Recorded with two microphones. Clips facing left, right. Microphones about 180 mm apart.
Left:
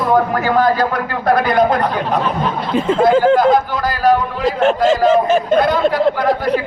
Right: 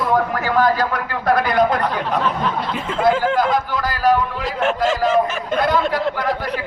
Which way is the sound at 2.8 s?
35° left (ahead or behind).